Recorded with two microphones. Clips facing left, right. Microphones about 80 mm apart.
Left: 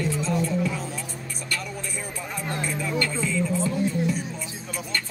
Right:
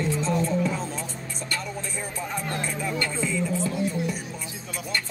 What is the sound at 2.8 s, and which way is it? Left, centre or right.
Speech, centre.